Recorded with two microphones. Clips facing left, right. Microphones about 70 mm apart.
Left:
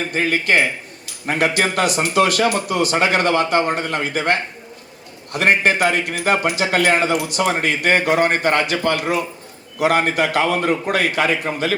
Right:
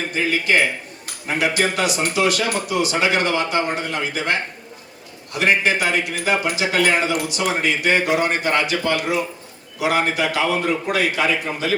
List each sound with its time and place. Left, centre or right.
0.1 s a man's voice: left